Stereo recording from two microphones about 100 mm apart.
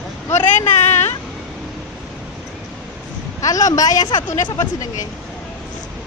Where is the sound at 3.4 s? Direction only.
35° left (ahead or behind).